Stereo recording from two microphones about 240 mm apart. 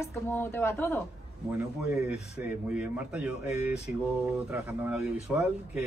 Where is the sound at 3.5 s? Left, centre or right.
Left.